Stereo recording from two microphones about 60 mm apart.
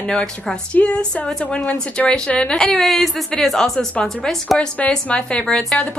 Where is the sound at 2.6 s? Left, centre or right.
Centre.